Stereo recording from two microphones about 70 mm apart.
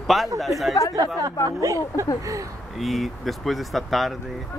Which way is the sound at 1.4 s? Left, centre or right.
Right.